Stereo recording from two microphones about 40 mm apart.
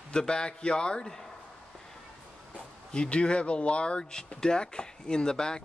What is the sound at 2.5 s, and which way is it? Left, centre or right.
Speech, left.